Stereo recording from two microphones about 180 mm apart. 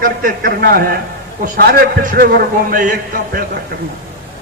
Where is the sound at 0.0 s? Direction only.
50° right (ahead or behind).